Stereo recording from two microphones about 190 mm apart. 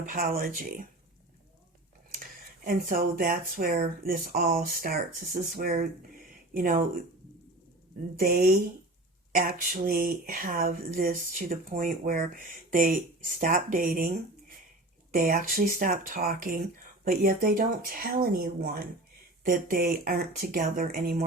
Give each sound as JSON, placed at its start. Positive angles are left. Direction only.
{"t": 0.0, "sound": "speech", "side_deg": -50}
{"t": 2.6, "sound": "speech", "side_deg": -50}
{"t": 8.2, "sound": "speech", "side_deg": -55}
{"t": 15.1, "sound": "speech", "side_deg": -45}